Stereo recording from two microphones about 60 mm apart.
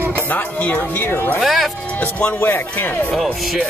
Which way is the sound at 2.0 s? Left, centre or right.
Left.